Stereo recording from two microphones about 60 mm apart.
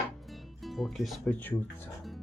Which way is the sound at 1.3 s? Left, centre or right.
Left.